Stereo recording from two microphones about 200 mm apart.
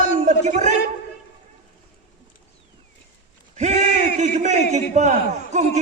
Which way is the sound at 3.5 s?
35° right (ahead or behind).